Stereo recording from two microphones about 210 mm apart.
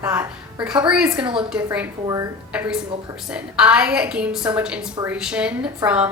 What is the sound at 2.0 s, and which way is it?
Speech, 15° right (ahead or behind).